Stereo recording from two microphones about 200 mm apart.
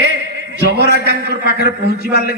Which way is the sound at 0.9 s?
50° left (ahead or behind).